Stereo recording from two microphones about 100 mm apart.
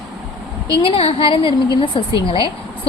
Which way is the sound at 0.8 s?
70° left (ahead or behind).